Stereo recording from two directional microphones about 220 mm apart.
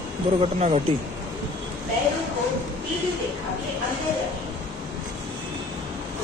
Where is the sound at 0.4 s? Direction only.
30° right (ahead or behind).